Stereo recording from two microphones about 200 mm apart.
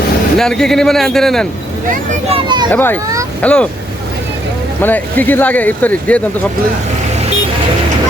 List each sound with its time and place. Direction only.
0.3 s speech: 5° left (ahead or behind)
2.3 s speech: 20° right (ahead or behind)
2.7 s speech: 10° left (ahead or behind)
4.8 s speech: 10° left (ahead or behind)